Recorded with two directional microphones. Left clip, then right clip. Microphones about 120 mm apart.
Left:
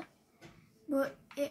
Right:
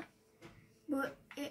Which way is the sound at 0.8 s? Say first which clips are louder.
Left 5 dB; 70° left (ahead or behind).